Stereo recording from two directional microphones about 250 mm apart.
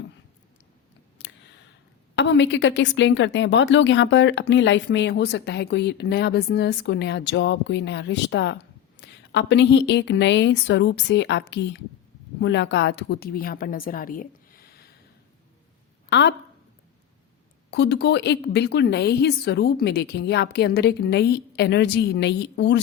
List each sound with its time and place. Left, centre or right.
1.2 s a sound: left
2.1 s a woman's voice: left
16.0 s speech: left
17.7 s a woman's voice: left